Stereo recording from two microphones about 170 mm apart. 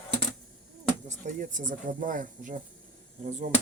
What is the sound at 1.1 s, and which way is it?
Speech, 50° right (ahead or behind).